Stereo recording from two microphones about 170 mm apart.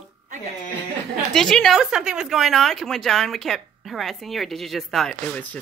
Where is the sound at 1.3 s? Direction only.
5° left (ahead or behind).